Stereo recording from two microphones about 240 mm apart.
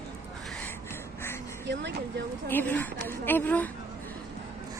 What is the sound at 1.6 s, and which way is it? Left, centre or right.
Speech, right.